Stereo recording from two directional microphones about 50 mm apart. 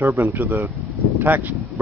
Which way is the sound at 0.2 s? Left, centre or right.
Right.